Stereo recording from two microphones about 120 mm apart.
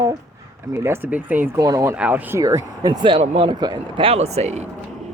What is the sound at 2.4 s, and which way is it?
Speech, 30° right (ahead or behind).